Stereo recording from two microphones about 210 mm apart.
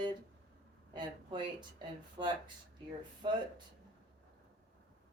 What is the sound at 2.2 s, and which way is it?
Speech, 20° right (ahead or behind).